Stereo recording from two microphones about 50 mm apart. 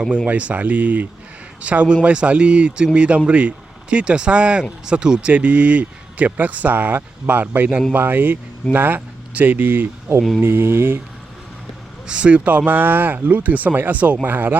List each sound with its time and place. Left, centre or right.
0.3 s speech: right
5.3 s speech: right
12.0 s speech: right